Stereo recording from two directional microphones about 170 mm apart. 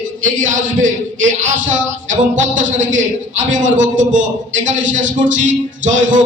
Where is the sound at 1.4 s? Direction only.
45° right (ahead or behind).